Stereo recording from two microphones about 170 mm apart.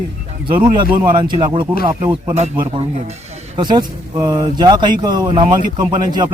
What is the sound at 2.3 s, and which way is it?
Speech, 40° right (ahead or behind).